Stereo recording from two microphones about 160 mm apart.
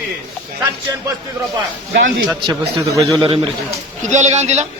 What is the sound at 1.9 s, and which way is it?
Speech, 80° right.